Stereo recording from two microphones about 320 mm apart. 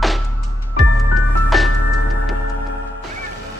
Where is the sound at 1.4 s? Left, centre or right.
Centre.